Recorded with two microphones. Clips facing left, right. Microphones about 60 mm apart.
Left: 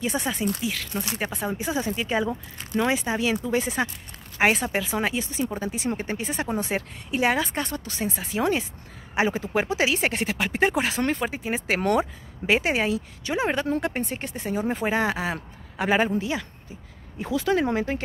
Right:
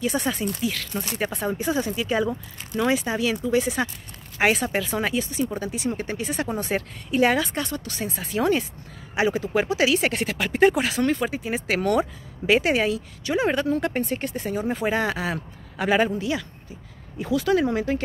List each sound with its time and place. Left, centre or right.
0.0 s speech: centre
9.1 s speech: left